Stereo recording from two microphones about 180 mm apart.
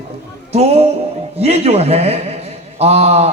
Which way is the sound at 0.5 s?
35° right (ahead or behind).